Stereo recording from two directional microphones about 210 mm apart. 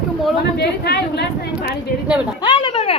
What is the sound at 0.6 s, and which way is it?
A woman's voice, 50° left (ahead or behind).